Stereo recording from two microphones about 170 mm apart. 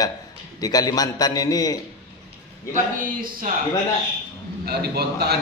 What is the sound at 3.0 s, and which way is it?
Speech, 55° right (ahead or behind).